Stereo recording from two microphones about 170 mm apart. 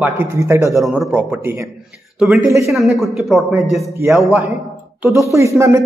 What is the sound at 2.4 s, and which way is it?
Speech, 20° right (ahead or behind).